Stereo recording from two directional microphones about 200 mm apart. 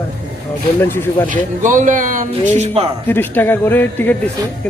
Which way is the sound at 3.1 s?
10° left (ahead or behind).